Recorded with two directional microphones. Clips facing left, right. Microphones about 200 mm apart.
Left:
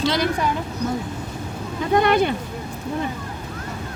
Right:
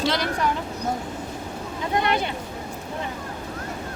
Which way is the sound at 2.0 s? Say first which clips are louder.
Left 7 dB; 50° left (ahead or behind).